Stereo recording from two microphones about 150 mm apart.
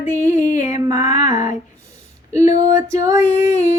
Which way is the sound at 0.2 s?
55° left (ahead or behind).